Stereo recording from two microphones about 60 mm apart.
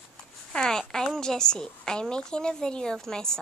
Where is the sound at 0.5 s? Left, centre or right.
Centre.